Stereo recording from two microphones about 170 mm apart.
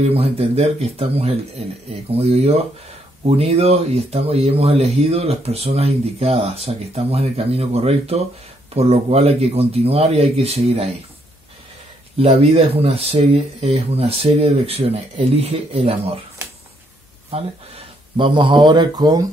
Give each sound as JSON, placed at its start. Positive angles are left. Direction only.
{"t": 0.0, "sound": "speech", "side_deg": -35}
{"t": 12.2, "sound": "speech", "side_deg": -35}
{"t": 17.3, "sound": "speech", "side_deg": -35}